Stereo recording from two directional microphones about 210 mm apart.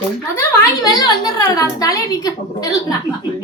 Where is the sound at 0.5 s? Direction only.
15° left (ahead or behind).